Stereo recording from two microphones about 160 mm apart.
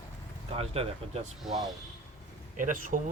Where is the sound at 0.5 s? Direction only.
35° right (ahead or behind).